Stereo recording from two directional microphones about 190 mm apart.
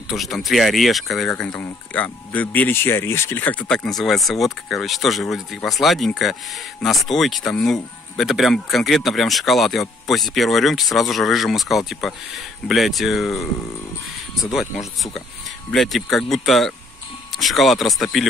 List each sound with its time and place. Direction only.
0.1 s speech: centre (ahead or behind)
15.7 s speech: centre (ahead or behind)